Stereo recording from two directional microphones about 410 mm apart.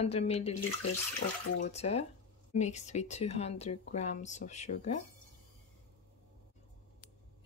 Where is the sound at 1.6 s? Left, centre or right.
Centre.